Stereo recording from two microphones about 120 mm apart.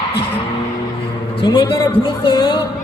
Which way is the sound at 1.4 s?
35° left (ahead or behind).